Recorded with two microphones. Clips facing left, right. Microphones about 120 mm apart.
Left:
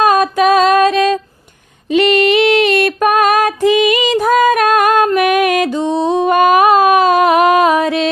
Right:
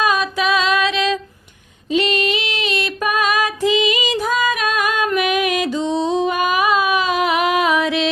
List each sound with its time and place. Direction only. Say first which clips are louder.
0.0 s music: left 7 dB; 45° left (ahead or behind)
1.9 s female singing: left 7 dB; 60° left (ahead or behind)
5.1 s music: left 6 dB; 55° left (ahead or behind)